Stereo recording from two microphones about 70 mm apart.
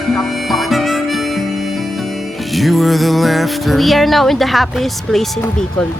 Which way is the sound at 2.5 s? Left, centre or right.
Centre.